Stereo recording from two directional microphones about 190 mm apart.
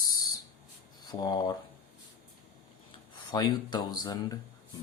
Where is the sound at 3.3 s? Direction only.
20° left (ahead or behind).